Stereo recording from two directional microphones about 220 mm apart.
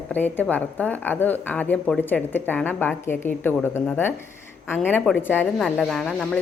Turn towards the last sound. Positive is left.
turn(degrees=0)  # may be behind; listen again after turning